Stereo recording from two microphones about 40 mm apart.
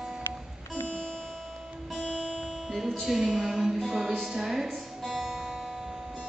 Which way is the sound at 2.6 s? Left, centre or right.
Centre.